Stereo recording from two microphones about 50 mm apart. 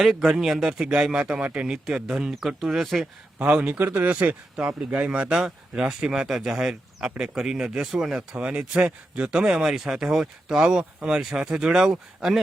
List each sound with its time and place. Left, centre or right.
0.0 s speech: centre
0.9 s speech: centre
2.6 s speech: centre
3.3 s speech: right
4.9 s speech: right
7.9 s speech: centre
8.4 s speech: right